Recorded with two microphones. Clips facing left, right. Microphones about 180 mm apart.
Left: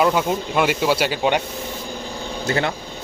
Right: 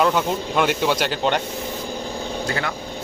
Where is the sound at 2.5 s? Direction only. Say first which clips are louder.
Left 7 dB; 25° left (ahead or behind).